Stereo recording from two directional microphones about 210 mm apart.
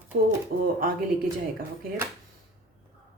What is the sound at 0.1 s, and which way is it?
Speech, 45° right (ahead or behind).